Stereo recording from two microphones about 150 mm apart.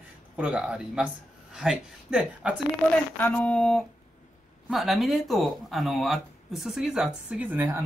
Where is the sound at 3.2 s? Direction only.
10° left (ahead or behind).